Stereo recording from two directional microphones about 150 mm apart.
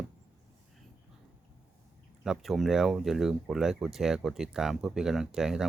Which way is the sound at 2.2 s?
Centre (ahead or behind).